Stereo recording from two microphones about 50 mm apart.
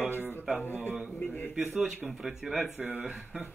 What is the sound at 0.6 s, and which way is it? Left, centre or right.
Speech, left.